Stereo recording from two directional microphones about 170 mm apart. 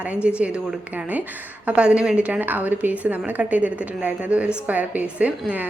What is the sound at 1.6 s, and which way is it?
A woman's voice, 5° right (ahead or behind).